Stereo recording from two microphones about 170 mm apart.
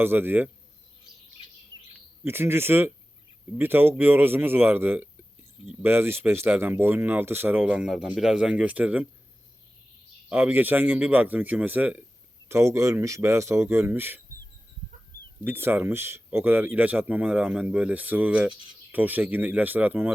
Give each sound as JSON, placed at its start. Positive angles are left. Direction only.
{"t": 0.0, "sound": "speech", "side_deg": -10}
{"t": 2.2, "sound": "speech", "side_deg": -15}
{"t": 10.2, "sound": "speech", "side_deg": -10}
{"t": 15.4, "sound": "speech", "side_deg": -10}